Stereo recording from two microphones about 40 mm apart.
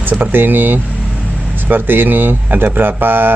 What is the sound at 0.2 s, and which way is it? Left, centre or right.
Speech, right.